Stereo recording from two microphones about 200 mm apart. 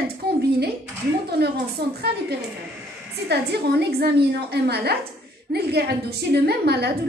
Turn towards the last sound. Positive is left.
turn(degrees=-55)  # may be behind; listen again after turning